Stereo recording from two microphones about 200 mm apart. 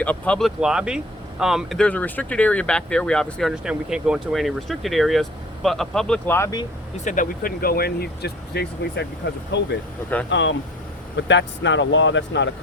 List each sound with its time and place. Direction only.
0.0 s speech: 5° left (ahead or behind)
6.9 s speech: 40° left (ahead or behind); by 12.5 s 65° left (ahead or behind)